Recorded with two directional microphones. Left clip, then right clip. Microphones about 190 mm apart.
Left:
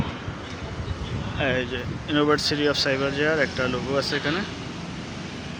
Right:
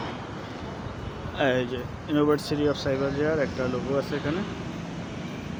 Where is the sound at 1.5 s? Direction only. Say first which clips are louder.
Left 1 dB; 15° right (ahead or behind).